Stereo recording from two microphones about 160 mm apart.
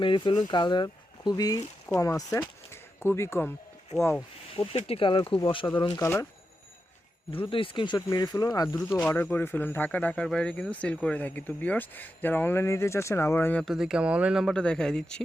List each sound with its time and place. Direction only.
0.0 s speech: 30° left (ahead or behind); by 3.5 s 15° left (ahead or behind)
4.5 s speech: 35° left (ahead or behind)
7.3 s speech: 35° left (ahead or behind)
9.0 s speech: 10° left (ahead or behind)
13.7 s speech: 5° right (ahead or behind)